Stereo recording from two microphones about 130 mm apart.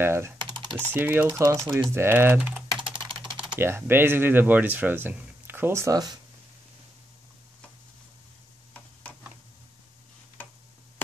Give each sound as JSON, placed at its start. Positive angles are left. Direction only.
{"t": 0.0, "sound": "speech", "side_deg": -20}
{"t": 0.4, "sound": "typing", "side_deg": -35}
{"t": 0.9, "sound": "speech", "side_deg": -15}
{"t": 3.1, "sound": "typing", "side_deg": -40}
{"t": 3.5, "sound": "speech", "side_deg": -15}